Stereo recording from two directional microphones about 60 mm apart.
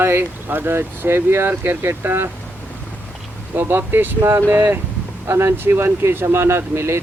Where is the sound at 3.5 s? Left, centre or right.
Right.